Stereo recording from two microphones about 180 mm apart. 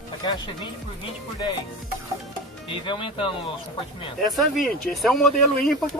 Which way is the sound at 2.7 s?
30° left (ahead or behind).